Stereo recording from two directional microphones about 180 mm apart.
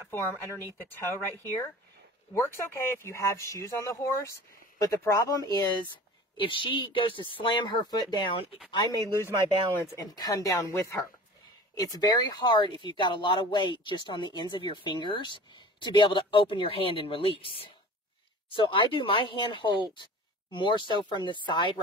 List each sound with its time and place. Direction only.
0.1 s speech: 15° left (ahead or behind)